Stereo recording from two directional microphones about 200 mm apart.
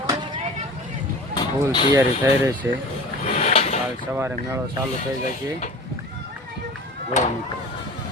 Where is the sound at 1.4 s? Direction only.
25° left (ahead or behind).